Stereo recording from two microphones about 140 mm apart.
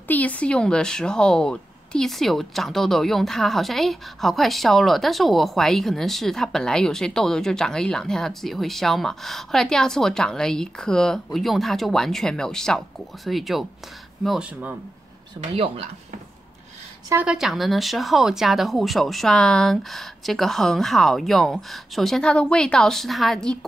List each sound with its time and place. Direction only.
0.1 s speech: 10° left (ahead or behind)
17.1 s speech: 10° right (ahead or behind)